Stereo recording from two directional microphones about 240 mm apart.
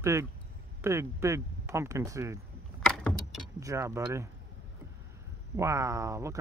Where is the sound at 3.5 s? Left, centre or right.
Centre.